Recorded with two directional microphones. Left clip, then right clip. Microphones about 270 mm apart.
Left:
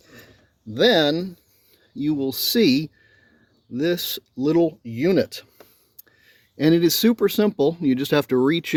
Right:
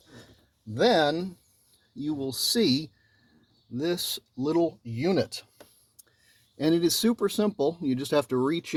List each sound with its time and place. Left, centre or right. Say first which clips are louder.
0.7 s speech: left 5 dB; left
6.6 s speech: left 6 dB; left